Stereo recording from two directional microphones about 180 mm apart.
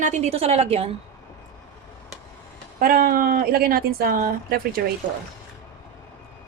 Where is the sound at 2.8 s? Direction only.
55° right (ahead or behind).